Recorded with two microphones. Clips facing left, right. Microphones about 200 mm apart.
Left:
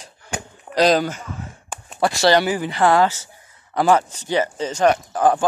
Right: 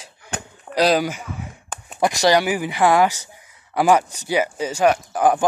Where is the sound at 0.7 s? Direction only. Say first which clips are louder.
Left 1 dB; 10° right (ahead or behind).